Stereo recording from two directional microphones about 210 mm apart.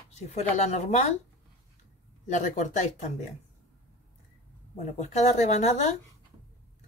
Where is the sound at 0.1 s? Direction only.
30° left (ahead or behind).